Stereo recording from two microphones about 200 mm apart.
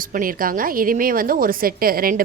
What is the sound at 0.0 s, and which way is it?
A woman's voice, 45° right (ahead or behind).